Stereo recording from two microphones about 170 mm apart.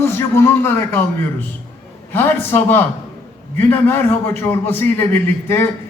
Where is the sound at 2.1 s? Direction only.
10° left (ahead or behind).